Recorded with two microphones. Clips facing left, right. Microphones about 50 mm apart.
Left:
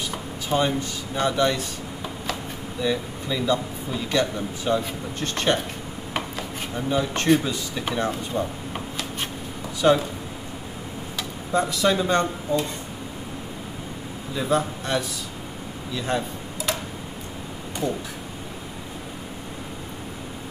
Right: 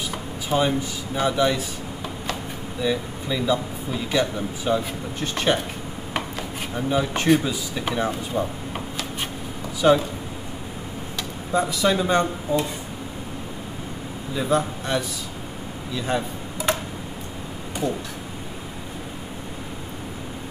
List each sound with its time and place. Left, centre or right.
0.1 s speech: centre
2.8 s speech: centre
6.7 s speech: centre
11.1 s speech: centre
14.3 s a man's voice: centre
16.7 s tick-tock: right
17.8 s speech: centre